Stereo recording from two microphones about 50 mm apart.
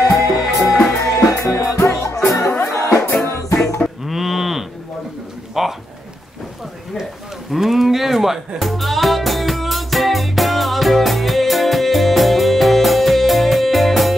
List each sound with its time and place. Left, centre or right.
0.2 s music: left
4.0 s livestock: centre
5.5 s pigeon: centre
7.5 s music: centre